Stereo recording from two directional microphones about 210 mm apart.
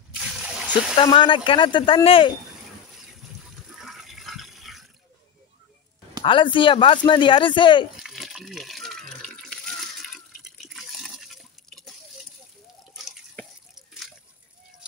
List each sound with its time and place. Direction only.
0.2 s splash: 5° right (ahead or behind)
0.9 s speech: 25° left (ahead or behind)
2.9 s water: centre (ahead or behind)
6.2 s speech: 25° left (ahead or behind)
8.0 s water: centre (ahead or behind)